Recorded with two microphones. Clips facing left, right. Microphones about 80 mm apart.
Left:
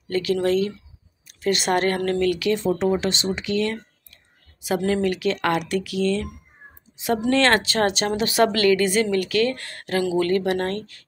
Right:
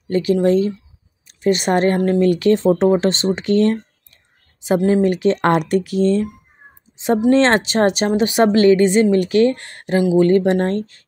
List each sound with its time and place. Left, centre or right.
0.1 s speech: right
2.3 s speech: right